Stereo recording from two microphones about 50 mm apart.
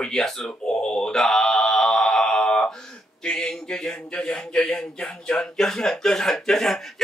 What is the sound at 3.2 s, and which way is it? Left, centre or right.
Speech, centre.